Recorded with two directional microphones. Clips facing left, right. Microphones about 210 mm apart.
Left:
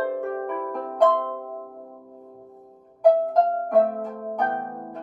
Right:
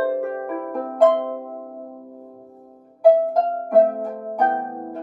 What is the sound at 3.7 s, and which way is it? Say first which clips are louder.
Harp: right 4 dB; 40° right (ahead or behind).